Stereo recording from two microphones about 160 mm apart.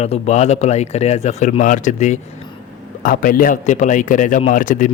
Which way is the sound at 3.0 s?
65° left (ahead or behind).